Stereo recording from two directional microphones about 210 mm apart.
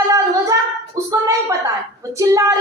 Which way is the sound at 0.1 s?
15° right (ahead or behind).